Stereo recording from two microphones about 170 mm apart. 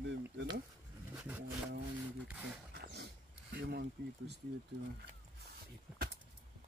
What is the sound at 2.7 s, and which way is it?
Dog, 65° right (ahead or behind).